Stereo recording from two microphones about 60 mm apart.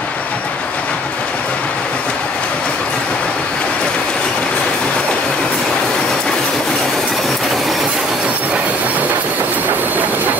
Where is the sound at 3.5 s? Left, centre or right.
Centre.